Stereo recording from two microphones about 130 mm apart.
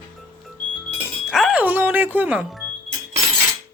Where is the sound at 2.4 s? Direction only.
Centre (ahead or behind).